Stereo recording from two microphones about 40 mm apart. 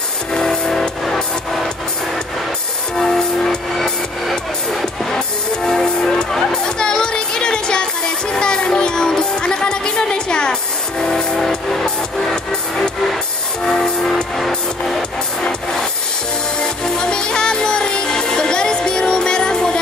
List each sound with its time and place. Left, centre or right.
0.3 s music: centre
3.0 s music: centre
3.7 s music: centre
16.6 s music: centre